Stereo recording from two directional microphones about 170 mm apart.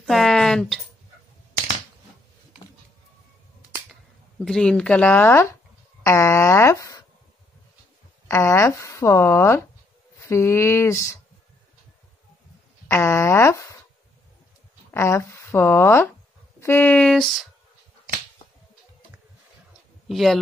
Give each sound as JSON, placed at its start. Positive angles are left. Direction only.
{"t": 0.0, "sound": "a sound", "side_deg": 0}
{"t": 4.5, "sound": "speech", "side_deg": 5}
{"t": 8.3, "sound": "speech", "side_deg": 15}
{"t": 12.8, "sound": "speech", "side_deg": 15}
{"t": 14.9, "sound": "speech", "side_deg": 15}
{"t": 20.1, "sound": "speech", "side_deg": 0}